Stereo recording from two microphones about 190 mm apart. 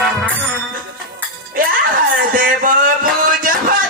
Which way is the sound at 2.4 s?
45° right (ahead or behind).